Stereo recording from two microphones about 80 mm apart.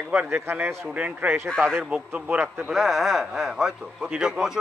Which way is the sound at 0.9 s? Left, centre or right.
Centre.